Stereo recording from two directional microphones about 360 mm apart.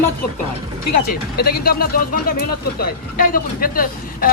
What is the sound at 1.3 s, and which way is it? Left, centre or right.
Speech, left.